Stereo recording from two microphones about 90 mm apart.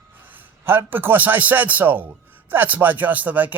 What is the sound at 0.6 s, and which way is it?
Speech, 25° right (ahead or behind).